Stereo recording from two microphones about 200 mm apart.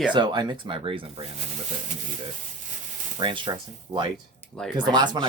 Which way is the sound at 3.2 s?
25° right (ahead or behind).